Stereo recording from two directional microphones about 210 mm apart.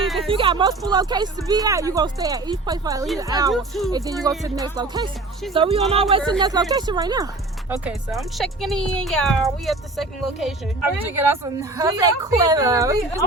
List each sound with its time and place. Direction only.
0.0 s a sound: centre (ahead or behind)
0.3 s a woman's voice: 25° right (ahead or behind)
3.5 s speech: centre (ahead or behind)
3.9 s a woman's voice: 15° right (ahead or behind)
5.5 s speech: 30° right (ahead or behind)
8.1 s a woman's voice: centre (ahead or behind); by 13.2 s 15° right (ahead or behind)